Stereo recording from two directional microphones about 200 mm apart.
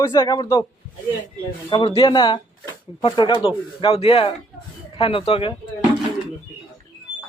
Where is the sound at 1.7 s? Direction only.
25° left (ahead or behind).